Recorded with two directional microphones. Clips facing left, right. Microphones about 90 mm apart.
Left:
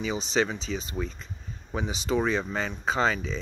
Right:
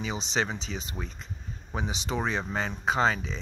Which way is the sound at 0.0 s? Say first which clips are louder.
Left 3 dB; 25° right (ahead or behind).